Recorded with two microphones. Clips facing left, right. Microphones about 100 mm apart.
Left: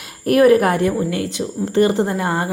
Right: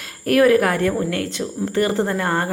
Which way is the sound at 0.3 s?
20° left (ahead or behind).